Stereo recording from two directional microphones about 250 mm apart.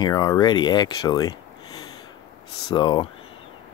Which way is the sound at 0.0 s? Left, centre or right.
Centre.